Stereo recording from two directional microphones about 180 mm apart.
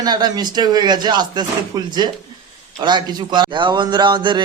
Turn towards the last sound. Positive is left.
turn(degrees=-25)  # may be behind; listen again after turning